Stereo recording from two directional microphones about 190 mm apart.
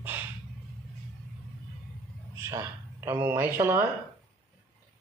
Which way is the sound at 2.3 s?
15° right (ahead or behind).